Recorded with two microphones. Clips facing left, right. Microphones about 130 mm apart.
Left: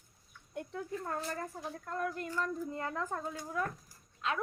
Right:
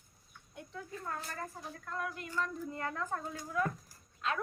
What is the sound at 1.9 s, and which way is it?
Speech, 40° left (ahead or behind).